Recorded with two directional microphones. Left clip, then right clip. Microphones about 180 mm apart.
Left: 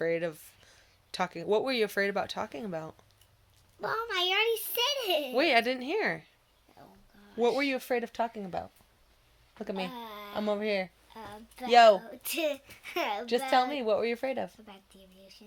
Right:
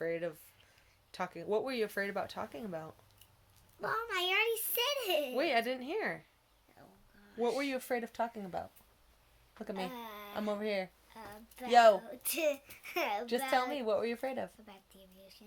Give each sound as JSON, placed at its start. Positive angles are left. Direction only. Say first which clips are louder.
{"t": 0.0, "sound": "a sound", "louder": "left 6 dB", "side_deg": 45}
{"t": 1.1, "sound": "speech", "louder": "left 6 dB", "side_deg": 45}
{"t": 3.8, "sound": "a child's voice", "louder": "left 4 dB", "side_deg": 0}
{"t": 5.3, "sound": "speech", "louder": "left 6 dB", "side_deg": 45}
{"t": 6.8, "sound": "a sound", "louder": "left 5 dB", "side_deg": 0}
{"t": 7.4, "sound": "speech", "louder": "left 6 dB", "side_deg": 40}
{"t": 9.6, "sound": "speech", "louder": "left 4 dB", "side_deg": 35}
{"t": 9.9, "sound": "a sound", "louder": "left 4 dB", "side_deg": -5}
{"t": 10.3, "sound": "speech", "louder": "left 6 dB", "side_deg": 30}
{"t": 11.1, "sound": "a woman's voice", "louder": "left 5 dB", "side_deg": -5}
{"t": 11.7, "sound": "speech", "louder": "left 5 dB", "side_deg": 30}
{"t": 11.9, "sound": "a child's voice", "louder": "left 3 dB", "side_deg": -5}
{"t": 13.5, "sound": "speech", "louder": "left 6 dB", "side_deg": 35}
{"t": 14.6, "sound": "a child's voice", "louder": "left 4 dB", "side_deg": -5}